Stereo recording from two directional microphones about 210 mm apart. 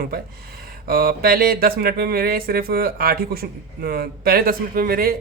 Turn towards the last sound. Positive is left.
turn(degrees=-45)  # may be behind; listen again after turning